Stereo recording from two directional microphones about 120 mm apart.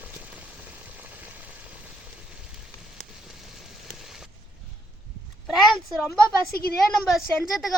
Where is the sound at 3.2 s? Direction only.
Centre (ahead or behind).